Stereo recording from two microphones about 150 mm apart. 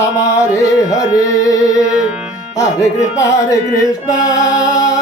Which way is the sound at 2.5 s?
20° left (ahead or behind).